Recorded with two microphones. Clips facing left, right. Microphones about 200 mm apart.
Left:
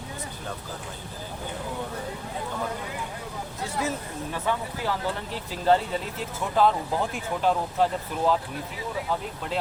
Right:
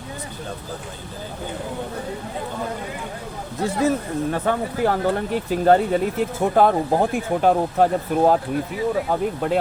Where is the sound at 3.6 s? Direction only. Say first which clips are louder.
Right 10 dB; 55° right (ahead or behind).